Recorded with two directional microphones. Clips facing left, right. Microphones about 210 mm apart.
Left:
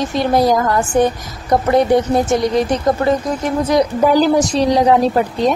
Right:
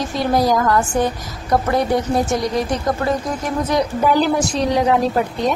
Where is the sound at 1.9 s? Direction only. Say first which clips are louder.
Left 6 dB; 25° left (ahead or behind).